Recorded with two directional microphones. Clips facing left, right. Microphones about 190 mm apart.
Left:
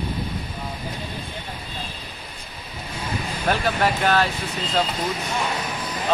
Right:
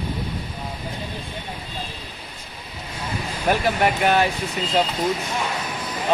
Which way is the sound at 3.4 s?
15° right (ahead or behind).